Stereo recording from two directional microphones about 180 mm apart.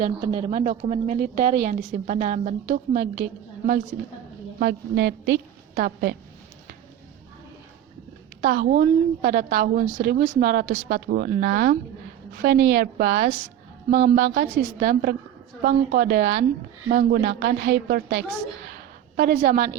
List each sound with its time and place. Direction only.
0.0 s a woman's voice: 35° right (ahead or behind); by 3.2 s 50° right (ahead or behind)
4.6 s a woman's voice: 70° right (ahead or behind)
8.4 s a woman's voice: 55° right (ahead or behind)
15.6 s a woman's voice: 70° right (ahead or behind)